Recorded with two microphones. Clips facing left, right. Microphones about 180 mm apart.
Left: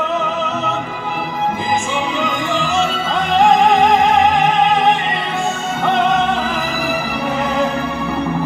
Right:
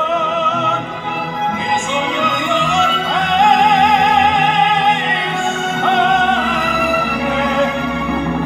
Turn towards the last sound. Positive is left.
turn(degrees=0)  # may be behind; listen again after turning